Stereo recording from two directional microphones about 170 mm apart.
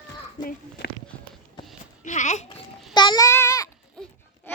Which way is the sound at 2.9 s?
25° left (ahead or behind).